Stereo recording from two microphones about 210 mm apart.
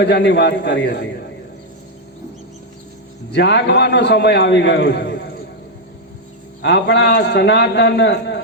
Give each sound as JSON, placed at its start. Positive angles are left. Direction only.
{"t": 0.0, "sound": "a man's voice", "side_deg": 55}
{"t": 3.3, "sound": "a man's voice", "side_deg": 55}
{"t": 6.6, "sound": "a man's voice", "side_deg": 55}